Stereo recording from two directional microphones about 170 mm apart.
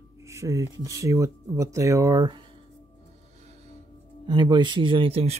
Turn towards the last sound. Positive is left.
turn(degrees=-35)  # may be behind; listen again after turning